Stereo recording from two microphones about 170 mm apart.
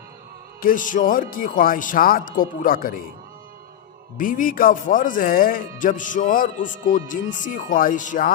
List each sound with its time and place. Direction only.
0.6 s speech: 55° left (ahead or behind)
4.2 s speech: 55° left (ahead or behind)